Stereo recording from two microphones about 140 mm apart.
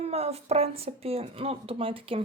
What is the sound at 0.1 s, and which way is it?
Speech, 45° right (ahead or behind).